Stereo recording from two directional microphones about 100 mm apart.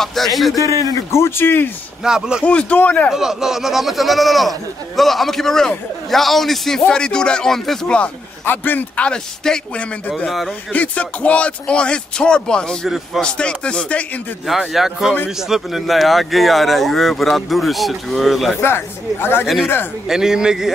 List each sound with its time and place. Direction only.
0.0 s speech: centre (ahead or behind)
1.1 s speech: 25° left (ahead or behind)
2.0 s speech: 5° right (ahead or behind)
2.4 s speech: 10° left (ahead or behind)
3.1 s speech: 5° right (ahead or behind)
10.7 s speech: 15° left (ahead or behind)
12.8 s speech: 5° right (ahead or behind)
13.2 s speech: 10° left (ahead or behind)
14.4 s speech: centre (ahead or behind)
18.6 s speech: 20° left (ahead or behind)
19.4 s speech: centre (ahead or behind)